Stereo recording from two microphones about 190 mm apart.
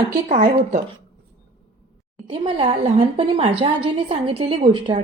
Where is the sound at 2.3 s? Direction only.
30° right (ahead or behind).